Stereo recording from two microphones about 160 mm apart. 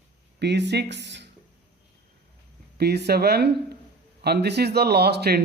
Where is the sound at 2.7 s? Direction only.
90° right.